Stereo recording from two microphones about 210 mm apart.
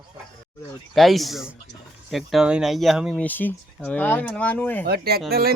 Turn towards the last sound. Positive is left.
turn(degrees=-45)  # may be behind; listen again after turning